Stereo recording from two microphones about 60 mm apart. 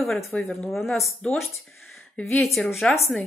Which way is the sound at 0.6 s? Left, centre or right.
Centre.